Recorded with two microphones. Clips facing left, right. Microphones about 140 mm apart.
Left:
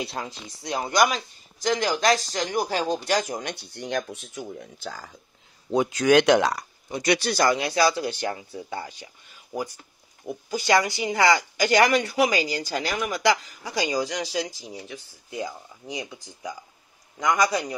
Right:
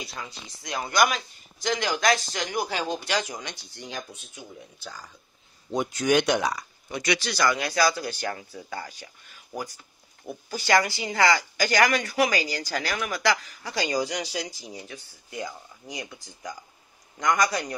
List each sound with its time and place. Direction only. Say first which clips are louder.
0.0 s speech: left 6 dB; 60° left (ahead or behind)
0.6 s speech: left 2 dB; 35° left (ahead or behind); by 5.1 s 60° left (ahead or behind)
5.9 s speech: left 5 dB; 90° left
7.2 s speech: left 5 dB; 45° left (ahead or behind)
7.4 s speech: left 1 dB; 30° left (ahead or behind)
13.9 s a man's voice: left 1 dB; centre (ahead or behind)